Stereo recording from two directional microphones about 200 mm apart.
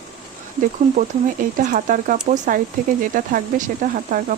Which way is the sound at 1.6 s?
40° right (ahead or behind).